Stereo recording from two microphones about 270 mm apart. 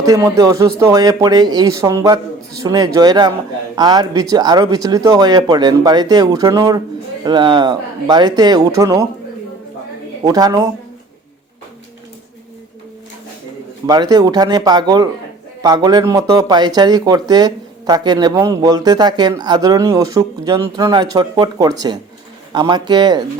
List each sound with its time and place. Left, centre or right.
0.0 s speech: centre
10.2 s speech: centre
13.8 s speech: centre